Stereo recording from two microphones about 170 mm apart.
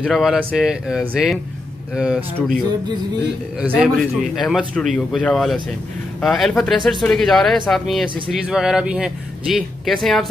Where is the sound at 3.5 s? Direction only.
5° right (ahead or behind).